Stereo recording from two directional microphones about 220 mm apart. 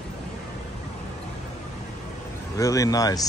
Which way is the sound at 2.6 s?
15° left (ahead or behind).